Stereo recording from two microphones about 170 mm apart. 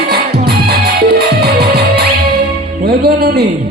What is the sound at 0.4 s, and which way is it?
Music, 70° right (ahead or behind).